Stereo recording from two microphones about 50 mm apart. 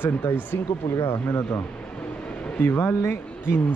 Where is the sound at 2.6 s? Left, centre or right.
Left.